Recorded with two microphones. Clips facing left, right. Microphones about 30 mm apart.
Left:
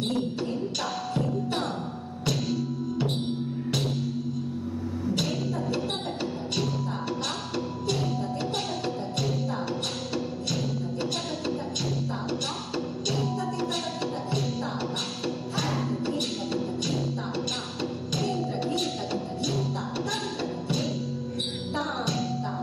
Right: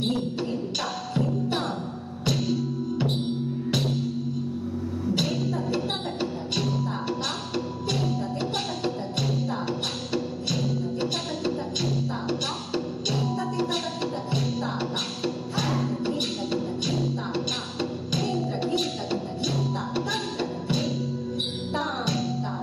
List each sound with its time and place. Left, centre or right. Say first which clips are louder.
0.0 s music: right 1 dB; centre
5.1 s music: right 3 dB; centre
18.1 s music: right 1 dB; centre
20.1 s music: right 2 dB; centre